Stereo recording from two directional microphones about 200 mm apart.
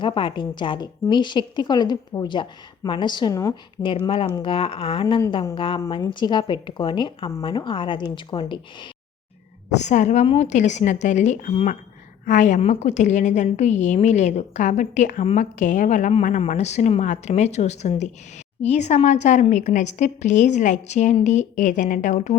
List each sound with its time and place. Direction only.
0.0 s a woman's voice: 25° left (ahead or behind)
9.6 s a woman's voice: 35° left (ahead or behind)